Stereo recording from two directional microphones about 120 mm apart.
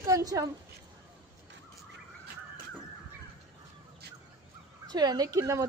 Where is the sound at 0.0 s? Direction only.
30° right (ahead or behind).